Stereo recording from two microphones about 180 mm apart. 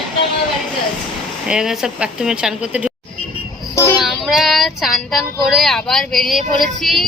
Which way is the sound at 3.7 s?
15° left (ahead or behind).